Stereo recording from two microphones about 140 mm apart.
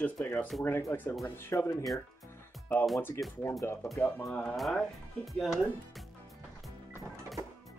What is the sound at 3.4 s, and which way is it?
Speech, 20° left (ahead or behind).